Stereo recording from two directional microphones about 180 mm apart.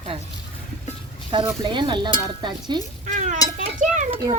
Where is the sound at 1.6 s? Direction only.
25° right (ahead or behind).